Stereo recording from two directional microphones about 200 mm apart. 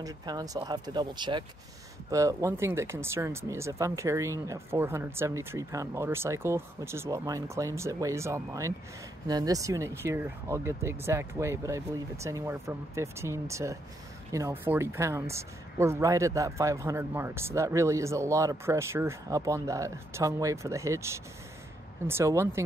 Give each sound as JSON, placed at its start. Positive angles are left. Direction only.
{"t": 0.0, "sound": "speech", "side_deg": -20}